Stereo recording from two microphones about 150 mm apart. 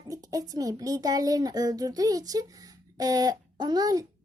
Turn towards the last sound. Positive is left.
turn(degrees=-25)  # may be behind; listen again after turning